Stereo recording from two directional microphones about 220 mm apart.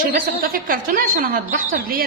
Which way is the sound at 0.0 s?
40° right (ahead or behind).